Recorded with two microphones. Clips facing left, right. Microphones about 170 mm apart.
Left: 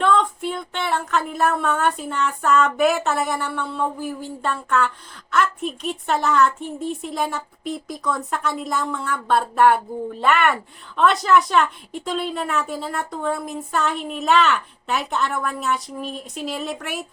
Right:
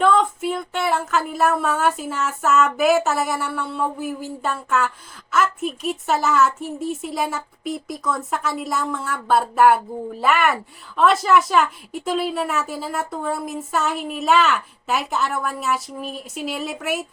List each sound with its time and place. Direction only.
0.0 s a woman's voice: 5° right (ahead or behind)